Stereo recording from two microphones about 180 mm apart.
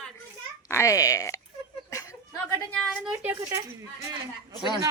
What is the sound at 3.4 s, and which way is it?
Speech, 15° right (ahead or behind).